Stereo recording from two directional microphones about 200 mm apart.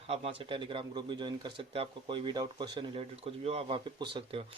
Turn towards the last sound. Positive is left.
turn(degrees=-25)  # may be behind; listen again after turning